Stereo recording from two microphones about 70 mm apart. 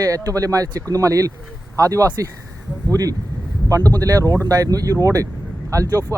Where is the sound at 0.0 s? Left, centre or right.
Right.